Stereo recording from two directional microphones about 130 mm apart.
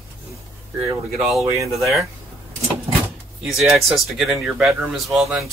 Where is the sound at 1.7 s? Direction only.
Centre (ahead or behind).